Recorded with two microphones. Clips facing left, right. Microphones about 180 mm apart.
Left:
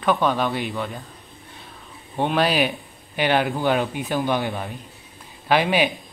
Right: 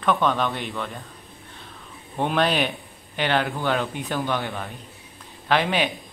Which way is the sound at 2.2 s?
5° left (ahead or behind).